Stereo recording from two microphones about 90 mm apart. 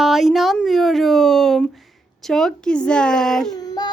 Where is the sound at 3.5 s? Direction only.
45° left (ahead or behind).